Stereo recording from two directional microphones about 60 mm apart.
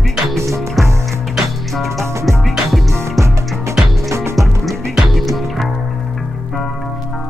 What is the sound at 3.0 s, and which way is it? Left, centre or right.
Music, right.